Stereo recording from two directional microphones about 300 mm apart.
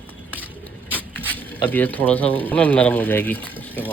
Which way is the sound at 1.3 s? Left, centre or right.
Centre.